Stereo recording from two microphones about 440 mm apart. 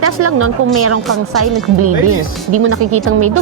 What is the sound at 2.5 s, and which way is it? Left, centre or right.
Speech, right.